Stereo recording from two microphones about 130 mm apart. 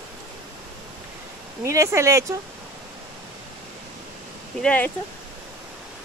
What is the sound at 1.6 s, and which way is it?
Speech, 20° right (ahead or behind).